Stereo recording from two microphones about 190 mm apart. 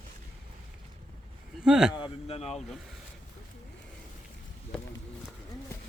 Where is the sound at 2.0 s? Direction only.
30° left (ahead or behind).